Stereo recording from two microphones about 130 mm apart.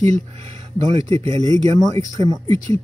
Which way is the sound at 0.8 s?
55° right (ahead or behind).